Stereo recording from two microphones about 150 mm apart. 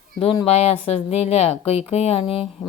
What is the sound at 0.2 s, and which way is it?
Speech, 40° left (ahead or behind).